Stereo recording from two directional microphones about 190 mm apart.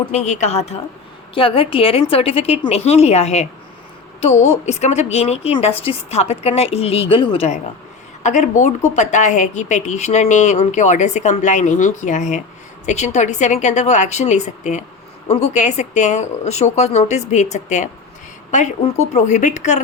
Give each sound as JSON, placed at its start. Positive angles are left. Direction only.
{"t": 0.1, "sound": "a woman's voice", "side_deg": 35}